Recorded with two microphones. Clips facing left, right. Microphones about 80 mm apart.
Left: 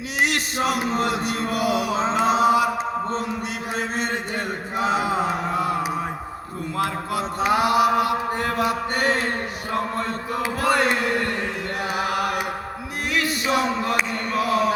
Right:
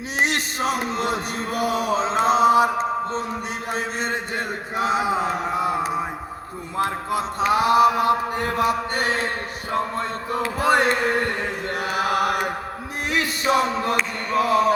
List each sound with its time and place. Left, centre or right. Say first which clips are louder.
0.2 s a sound: even; right
1.0 s mantra: left 1 dB; right
4.8 s mantra: even; right
6.7 s a sound: right 2 dB; right
7.5 s mantra: right 2 dB; right
10.6 s a sound: right 2 dB; right
12.1 s chant: right 3 dB; right
13.1 s music: right 1 dB; right
14.3 s mantra: right 3 dB; right